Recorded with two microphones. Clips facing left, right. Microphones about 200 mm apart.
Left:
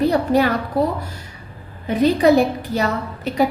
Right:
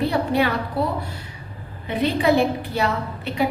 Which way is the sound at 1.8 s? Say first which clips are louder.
Left 5 dB; 40° left (ahead or behind).